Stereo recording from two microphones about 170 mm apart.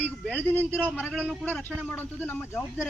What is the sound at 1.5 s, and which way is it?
A man's voice, 10° left (ahead or behind).